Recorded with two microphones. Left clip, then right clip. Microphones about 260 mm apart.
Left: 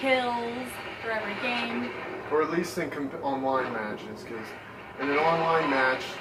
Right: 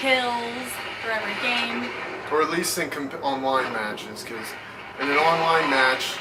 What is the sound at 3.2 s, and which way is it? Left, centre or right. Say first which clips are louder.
Speech: right 4 dB; left.